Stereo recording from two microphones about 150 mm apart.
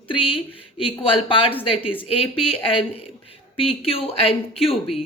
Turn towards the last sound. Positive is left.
turn(degrees=40)  # may be behind; listen again after turning